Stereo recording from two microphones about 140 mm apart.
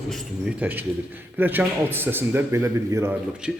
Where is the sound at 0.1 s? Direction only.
10° right (ahead or behind).